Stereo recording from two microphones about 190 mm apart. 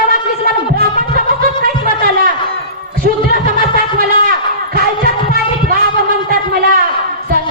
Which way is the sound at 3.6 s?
50° right (ahead or behind).